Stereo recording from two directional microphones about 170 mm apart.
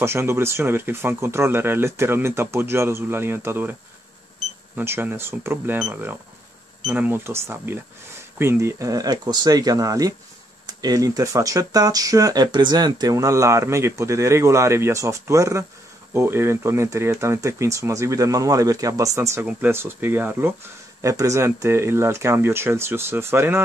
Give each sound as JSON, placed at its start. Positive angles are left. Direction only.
{"t": 0.0, "sound": "speech", "side_deg": -15}
{"t": 4.7, "sound": "speech", "side_deg": -10}